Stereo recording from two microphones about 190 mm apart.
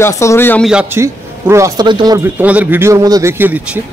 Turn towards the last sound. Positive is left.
turn(degrees=-10)  # may be behind; listen again after turning